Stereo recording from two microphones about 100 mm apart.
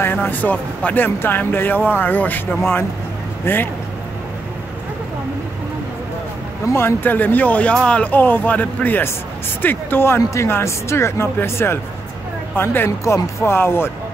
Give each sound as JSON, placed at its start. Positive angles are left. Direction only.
{"t": 0.0, "sound": "speech", "side_deg": 20}
{"t": 3.5, "sound": "speech", "side_deg": 20}
{"t": 6.7, "sound": "speech", "side_deg": 25}